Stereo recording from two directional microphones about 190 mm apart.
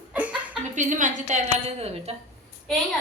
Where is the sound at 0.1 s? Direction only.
5° right (ahead or behind).